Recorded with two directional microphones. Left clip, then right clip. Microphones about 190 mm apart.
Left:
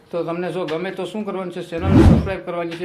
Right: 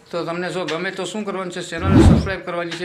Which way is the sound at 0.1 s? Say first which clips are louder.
Even; centre (ahead or behind).